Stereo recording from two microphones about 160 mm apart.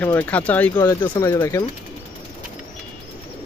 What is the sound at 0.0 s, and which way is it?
Speech, 10° left (ahead or behind).